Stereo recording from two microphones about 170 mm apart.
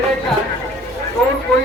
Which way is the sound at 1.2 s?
Centre (ahead or behind).